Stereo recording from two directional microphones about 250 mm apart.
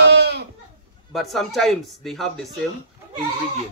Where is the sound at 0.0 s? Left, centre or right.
Right.